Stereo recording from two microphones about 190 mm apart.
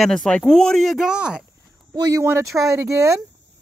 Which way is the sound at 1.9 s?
20° right (ahead or behind).